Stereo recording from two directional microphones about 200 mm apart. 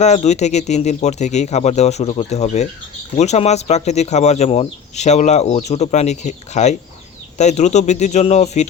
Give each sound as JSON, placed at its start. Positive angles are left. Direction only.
{"t": 0.0, "sound": "speech", "side_deg": 35}